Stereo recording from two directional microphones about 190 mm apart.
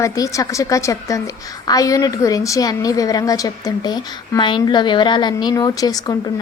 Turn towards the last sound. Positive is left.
turn(degrees=20)  # may be behind; listen again after turning